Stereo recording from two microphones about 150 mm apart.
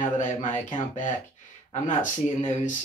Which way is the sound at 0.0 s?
55° left (ahead or behind).